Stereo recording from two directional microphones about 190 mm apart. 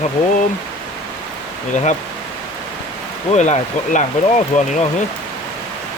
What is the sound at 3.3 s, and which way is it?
Speech, 40° left (ahead or behind).